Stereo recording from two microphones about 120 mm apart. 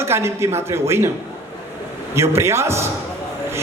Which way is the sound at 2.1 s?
20° right (ahead or behind).